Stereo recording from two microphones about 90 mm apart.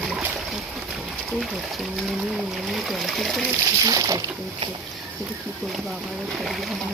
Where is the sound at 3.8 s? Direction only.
40° right (ahead or behind).